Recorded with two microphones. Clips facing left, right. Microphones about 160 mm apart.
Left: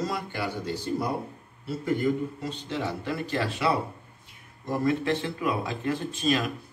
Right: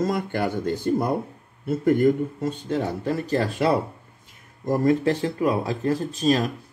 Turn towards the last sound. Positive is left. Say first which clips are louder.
# right 5 dB
turn(degrees=-40)  # may be behind; listen again after turning